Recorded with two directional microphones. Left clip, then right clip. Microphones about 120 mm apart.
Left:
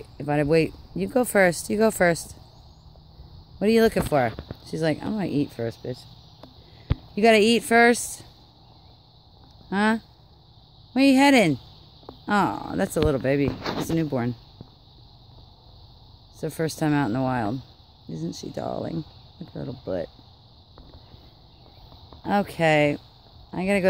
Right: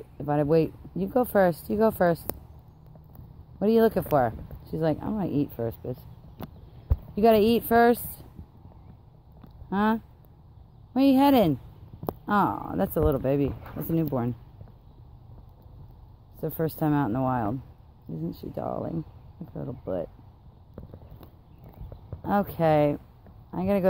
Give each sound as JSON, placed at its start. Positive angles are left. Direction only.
{"t": 0.2, "sound": "speech", "side_deg": 55}
{"t": 3.5, "sound": "speech", "side_deg": 60}
{"t": 5.2, "sound": "speech", "side_deg": 45}
{"t": 7.2, "sound": "speech", "side_deg": 55}
{"t": 9.7, "sound": "speech", "side_deg": 55}
{"t": 13.9, "sound": "speech", "side_deg": 70}
{"t": 16.3, "sound": "speech", "side_deg": 55}
{"t": 18.6, "sound": "speech", "side_deg": 90}
{"t": 19.6, "sound": "speech", "side_deg": 65}
{"t": 22.2, "sound": "speech", "side_deg": 55}